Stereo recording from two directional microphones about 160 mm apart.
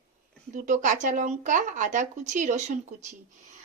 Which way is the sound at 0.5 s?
55° right (ahead or behind).